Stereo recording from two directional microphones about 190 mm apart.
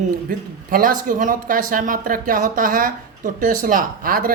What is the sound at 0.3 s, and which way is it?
Speech, 45° right (ahead or behind).